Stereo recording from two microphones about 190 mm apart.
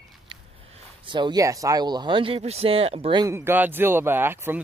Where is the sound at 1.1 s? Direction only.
25° right (ahead or behind).